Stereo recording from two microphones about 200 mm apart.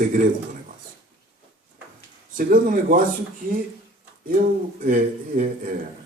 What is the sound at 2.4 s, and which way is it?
Speech, 40° right (ahead or behind).